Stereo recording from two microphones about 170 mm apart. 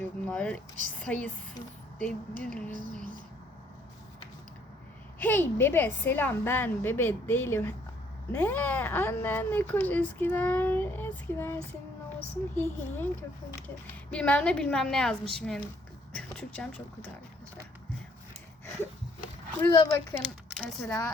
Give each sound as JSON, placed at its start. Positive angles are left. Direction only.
{"t": 0.0, "sound": "speech", "side_deg": 10}
{"t": 5.2, "sound": "a woman's voice", "side_deg": 10}
{"t": 19.7, "sound": "speech", "side_deg": 25}
{"t": 20.5, "sound": "a sound", "side_deg": 5}